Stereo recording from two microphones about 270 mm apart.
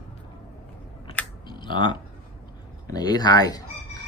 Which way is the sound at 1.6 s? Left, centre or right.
Centre.